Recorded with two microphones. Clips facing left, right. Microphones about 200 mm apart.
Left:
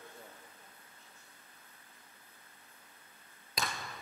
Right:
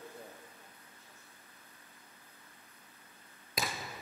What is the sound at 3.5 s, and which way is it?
Basketball bounce, centre (ahead or behind).